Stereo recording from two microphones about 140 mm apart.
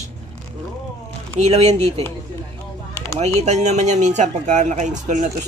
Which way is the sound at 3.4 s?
55° right (ahead or behind).